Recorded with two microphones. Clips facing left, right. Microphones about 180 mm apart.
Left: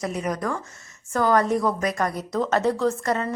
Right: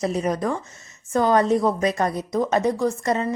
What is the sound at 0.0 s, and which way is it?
A woman's voice, 30° right (ahead or behind).